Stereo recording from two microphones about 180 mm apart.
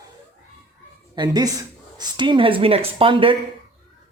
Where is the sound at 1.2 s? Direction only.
20° right (ahead or behind).